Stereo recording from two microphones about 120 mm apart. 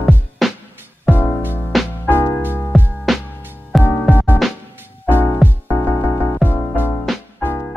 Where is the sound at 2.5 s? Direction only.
15° left (ahead or behind).